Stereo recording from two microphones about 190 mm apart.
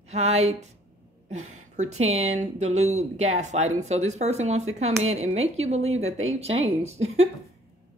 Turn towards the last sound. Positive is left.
turn(degrees=-35)  # may be behind; listen again after turning